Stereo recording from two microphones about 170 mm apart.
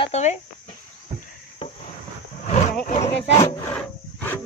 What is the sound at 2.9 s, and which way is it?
Speech, 35° left (ahead or behind).